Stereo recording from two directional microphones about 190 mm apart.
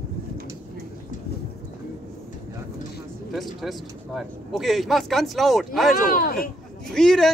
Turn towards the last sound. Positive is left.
turn(degrees=0)  # may be behind; listen again after turning